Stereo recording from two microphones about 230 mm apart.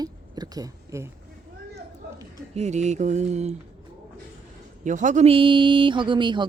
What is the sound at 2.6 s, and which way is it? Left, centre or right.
Mantra, right.